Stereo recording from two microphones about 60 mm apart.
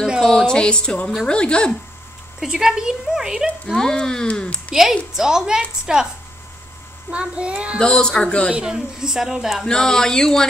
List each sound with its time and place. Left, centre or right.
0.2 s speech: centre
2.4 s speech: centre
3.7 s speech: centre
5.1 s speech: centre
7.1 s a child's voice: right
7.8 s speech: centre
8.5 s speech: centre
9.7 s speech: centre